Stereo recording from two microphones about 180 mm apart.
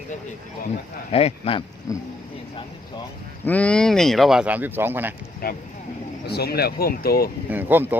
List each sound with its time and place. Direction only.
1.1 s speech: 30° left (ahead or behind)
1.9 s speech: 20° left (ahead or behind)
3.4 s speech: 10° left (ahead or behind); by 5.1 s 10° right (ahead or behind)
5.4 s speech: 55° left (ahead or behind)
7.5 s speech: 10° right (ahead or behind)